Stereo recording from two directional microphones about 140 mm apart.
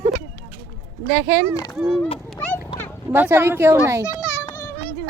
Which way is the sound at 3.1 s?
15° right (ahead or behind).